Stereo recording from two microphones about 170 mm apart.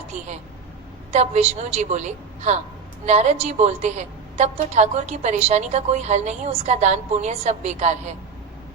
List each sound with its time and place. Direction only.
1.1 s a woman's voice: 40° right (ahead or behind)